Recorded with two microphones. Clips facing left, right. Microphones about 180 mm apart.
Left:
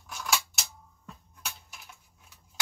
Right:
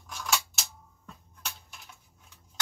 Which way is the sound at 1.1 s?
5° left (ahead or behind).